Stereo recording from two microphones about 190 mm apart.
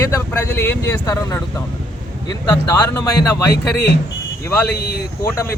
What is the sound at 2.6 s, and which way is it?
Speech, 15° left (ahead or behind).